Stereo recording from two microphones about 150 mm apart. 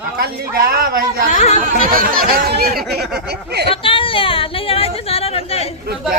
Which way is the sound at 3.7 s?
35° left (ahead or behind).